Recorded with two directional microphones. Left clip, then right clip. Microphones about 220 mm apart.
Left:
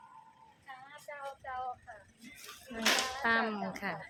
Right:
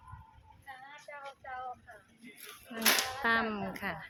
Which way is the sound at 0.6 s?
15° left (ahead or behind).